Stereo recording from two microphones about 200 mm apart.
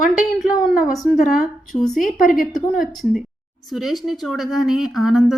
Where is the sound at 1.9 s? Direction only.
40° left (ahead or behind).